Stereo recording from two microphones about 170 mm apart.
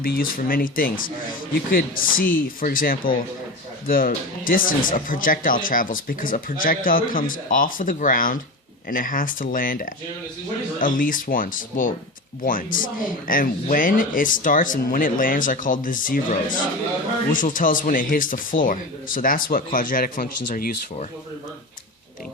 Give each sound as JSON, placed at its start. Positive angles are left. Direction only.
{"t": 0.0, "sound": "speech", "side_deg": 60}